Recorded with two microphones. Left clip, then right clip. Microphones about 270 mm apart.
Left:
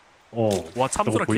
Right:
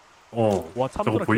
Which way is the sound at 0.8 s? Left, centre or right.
Left.